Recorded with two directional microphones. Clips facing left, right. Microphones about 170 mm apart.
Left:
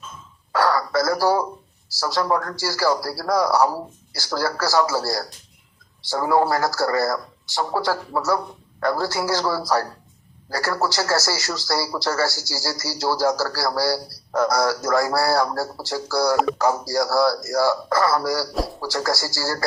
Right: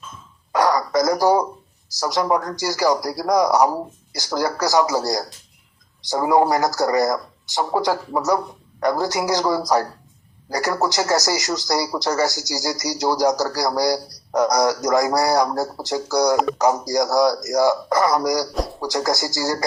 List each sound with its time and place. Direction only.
0.5 s radio: 20° right (ahead or behind)
1.9 s speech: 20° right (ahead or behind)